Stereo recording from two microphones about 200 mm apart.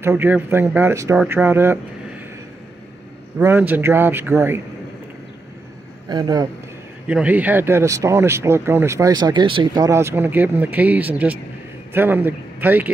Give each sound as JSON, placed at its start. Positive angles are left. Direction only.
{"t": 0.0, "sound": "speech", "side_deg": -10}
{"t": 3.3, "sound": "speech", "side_deg": -10}
{"t": 6.0, "sound": "a man's voice", "side_deg": -20}
{"t": 7.1, "sound": "a man's voice", "side_deg": -5}